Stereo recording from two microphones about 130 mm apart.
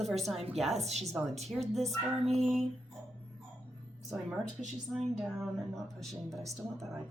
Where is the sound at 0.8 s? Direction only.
55° right (ahead or behind).